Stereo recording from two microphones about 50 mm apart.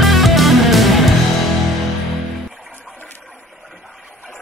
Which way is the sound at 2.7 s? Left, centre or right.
Right.